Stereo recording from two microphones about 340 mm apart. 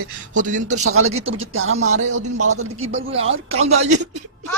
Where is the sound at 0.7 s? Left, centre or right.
Right.